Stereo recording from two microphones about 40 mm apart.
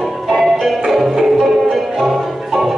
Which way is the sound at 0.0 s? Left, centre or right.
Centre.